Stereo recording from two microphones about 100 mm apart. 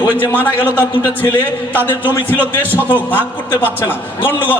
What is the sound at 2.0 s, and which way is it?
Speech, 20° right (ahead or behind).